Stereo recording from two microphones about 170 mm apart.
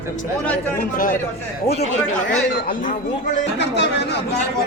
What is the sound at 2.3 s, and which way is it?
Speech, 50° left (ahead or behind).